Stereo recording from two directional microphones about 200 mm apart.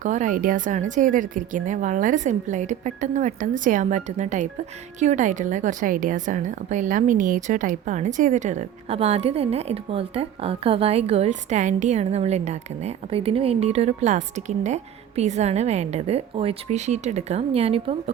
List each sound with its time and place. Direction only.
0.0 s a woman's voice: 40° right (ahead or behind)